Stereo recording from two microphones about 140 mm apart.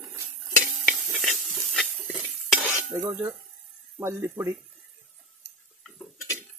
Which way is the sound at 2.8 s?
15° right (ahead or behind).